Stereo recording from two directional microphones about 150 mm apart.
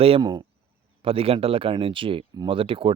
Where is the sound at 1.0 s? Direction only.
40° right (ahead or behind).